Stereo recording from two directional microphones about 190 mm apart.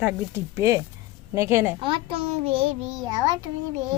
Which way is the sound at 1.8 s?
25° right (ahead or behind).